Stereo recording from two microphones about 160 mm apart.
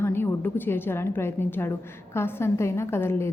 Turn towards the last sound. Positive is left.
turn(degrees=15)  # may be behind; listen again after turning